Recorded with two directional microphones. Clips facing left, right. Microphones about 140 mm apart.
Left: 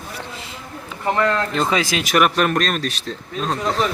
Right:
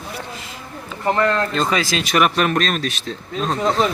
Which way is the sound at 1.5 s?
15° left (ahead or behind).